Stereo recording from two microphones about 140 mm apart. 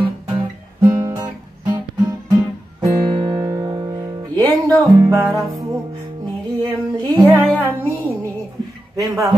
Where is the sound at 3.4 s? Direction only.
25° right (ahead or behind).